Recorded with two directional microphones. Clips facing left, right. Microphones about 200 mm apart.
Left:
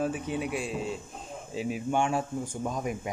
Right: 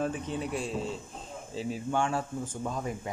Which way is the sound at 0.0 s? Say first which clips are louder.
Left 2 dB; 10° left (ahead or behind).